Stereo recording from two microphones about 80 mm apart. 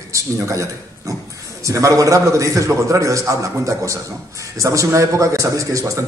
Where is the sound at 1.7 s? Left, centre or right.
Right.